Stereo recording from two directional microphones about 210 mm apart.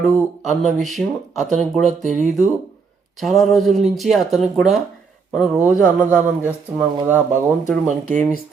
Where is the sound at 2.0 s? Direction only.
35° right (ahead or behind).